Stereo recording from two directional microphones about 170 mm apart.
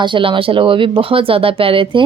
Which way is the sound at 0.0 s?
30° right (ahead or behind).